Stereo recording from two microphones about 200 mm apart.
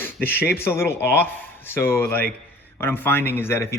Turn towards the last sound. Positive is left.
turn(degrees=15)  # may be behind; listen again after turning